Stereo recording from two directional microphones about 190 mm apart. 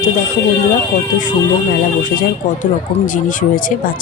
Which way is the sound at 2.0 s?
45° left (ahead or behind).